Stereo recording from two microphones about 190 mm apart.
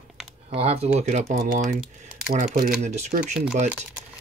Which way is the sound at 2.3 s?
45° right (ahead or behind).